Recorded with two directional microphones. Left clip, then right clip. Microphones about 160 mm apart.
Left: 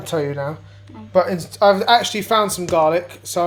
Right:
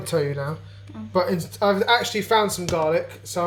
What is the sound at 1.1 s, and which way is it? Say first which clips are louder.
Speech: left 5 dB; 40° left (ahead or behind).